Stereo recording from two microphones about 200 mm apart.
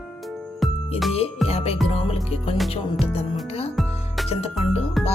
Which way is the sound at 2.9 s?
30° left (ahead or behind).